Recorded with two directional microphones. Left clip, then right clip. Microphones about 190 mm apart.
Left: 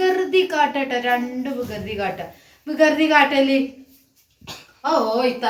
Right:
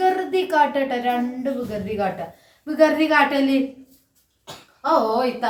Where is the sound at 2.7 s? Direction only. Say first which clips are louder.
Left 1 dB; 10° right (ahead or behind).